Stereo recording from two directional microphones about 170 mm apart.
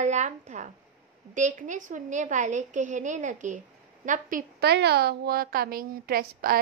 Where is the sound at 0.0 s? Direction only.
45° right (ahead or behind).